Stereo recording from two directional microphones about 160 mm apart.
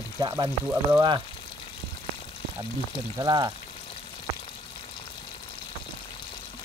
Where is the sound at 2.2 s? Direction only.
35° left (ahead or behind).